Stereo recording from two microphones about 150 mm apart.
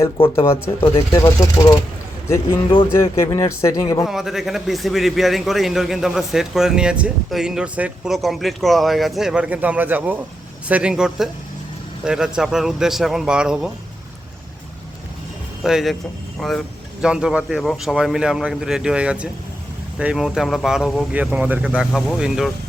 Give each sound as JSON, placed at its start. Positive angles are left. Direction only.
{"t": 0.0, "sound": "speech", "side_deg": 20}
{"t": 2.9, "sound": "speech", "side_deg": 20}
{"t": 4.0, "sound": "a man's voice", "side_deg": 0}
{"t": 15.6, "sound": "a man's voice", "side_deg": 0}